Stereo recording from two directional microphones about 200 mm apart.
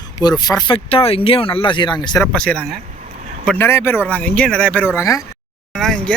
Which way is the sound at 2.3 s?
5° left (ahead or behind).